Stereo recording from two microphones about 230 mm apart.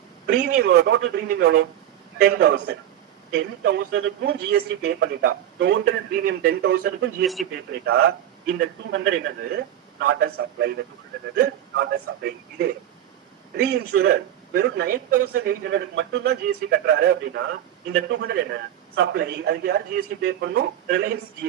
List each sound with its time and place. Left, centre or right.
0.4 s a man's voice: right